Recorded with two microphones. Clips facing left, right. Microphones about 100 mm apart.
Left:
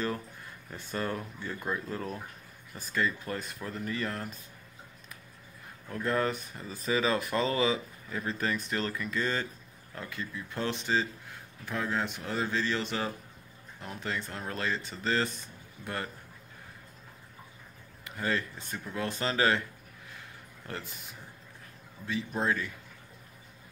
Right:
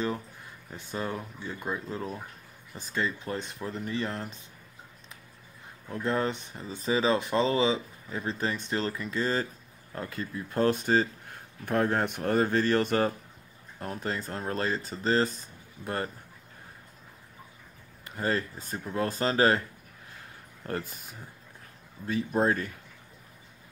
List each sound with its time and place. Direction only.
0.7 s speech: 15° right (ahead or behind)
5.9 s speech: 25° right (ahead or behind)
18.0 s speech: 40° right (ahead or behind)
20.6 s speech: 45° right (ahead or behind)
22.4 s speech: 40° right (ahead or behind)